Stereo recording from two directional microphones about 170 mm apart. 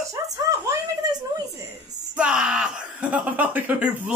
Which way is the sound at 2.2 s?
5° right (ahead or behind).